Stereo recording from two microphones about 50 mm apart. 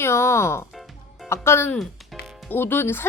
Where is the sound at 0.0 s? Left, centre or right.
Left.